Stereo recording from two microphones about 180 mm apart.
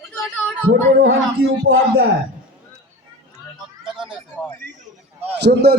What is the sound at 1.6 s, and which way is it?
Speech, 90° right.